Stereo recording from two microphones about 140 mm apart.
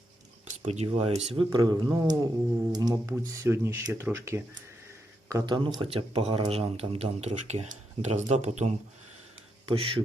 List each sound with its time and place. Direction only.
0.4 s speech: 55° right (ahead or behind)
1.4 s speech: 30° right (ahead or behind)
5.3 s a man's voice: 30° right (ahead or behind); by 8.7 s 55° right (ahead or behind)
9.6 s a man's voice: 40° right (ahead or behind)